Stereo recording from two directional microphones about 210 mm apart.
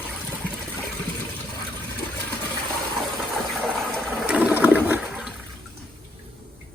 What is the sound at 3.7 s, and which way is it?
Toilet flush, centre (ahead or behind).